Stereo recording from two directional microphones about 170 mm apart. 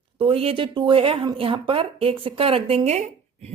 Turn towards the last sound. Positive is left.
turn(degrees=-35)  # may be behind; listen again after turning